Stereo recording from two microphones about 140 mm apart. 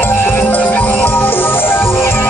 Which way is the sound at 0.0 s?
15° left (ahead or behind).